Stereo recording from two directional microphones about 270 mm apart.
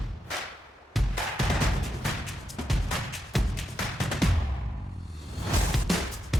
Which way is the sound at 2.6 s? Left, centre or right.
Centre.